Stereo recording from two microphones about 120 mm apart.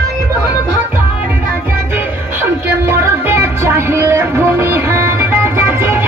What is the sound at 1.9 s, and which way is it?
Music, 20° right (ahead or behind).